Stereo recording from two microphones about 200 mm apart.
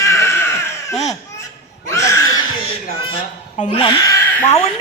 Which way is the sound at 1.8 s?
15° left (ahead or behind).